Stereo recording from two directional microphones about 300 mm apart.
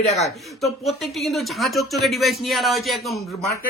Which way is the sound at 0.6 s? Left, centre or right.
Centre.